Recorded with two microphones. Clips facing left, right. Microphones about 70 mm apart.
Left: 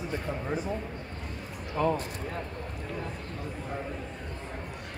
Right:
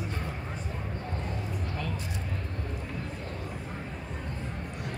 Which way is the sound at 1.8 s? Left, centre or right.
Left.